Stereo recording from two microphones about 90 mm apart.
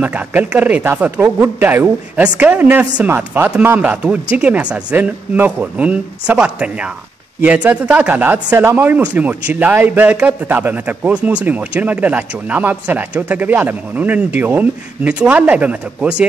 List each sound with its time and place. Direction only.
0.0 s speech: 20° right (ahead or behind)